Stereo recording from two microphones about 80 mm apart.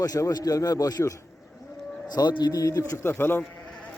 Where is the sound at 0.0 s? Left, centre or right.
Left.